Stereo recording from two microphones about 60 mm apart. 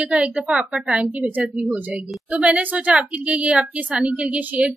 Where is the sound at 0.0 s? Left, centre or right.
Right.